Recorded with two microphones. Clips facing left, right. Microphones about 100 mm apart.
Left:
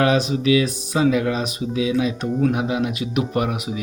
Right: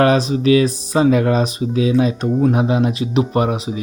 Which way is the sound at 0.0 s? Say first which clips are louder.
Right 4 dB; 40° right (ahead or behind).